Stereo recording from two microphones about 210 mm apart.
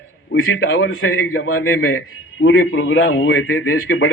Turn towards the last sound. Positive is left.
turn(degrees=90)